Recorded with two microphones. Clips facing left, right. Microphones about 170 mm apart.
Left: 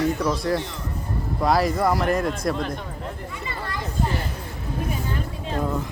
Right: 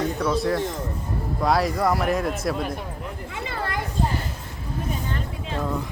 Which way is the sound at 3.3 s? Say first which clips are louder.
Right 2 dB; 75° right (ahead or behind).